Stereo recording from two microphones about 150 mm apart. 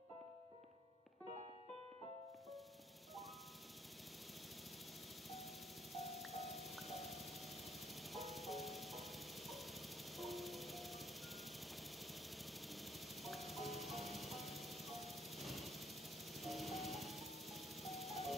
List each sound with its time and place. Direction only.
6.1 s music: centre (ahead or behind)
12.6 s music: centre (ahead or behind)
16.3 s ice cream truck: centre (ahead or behind)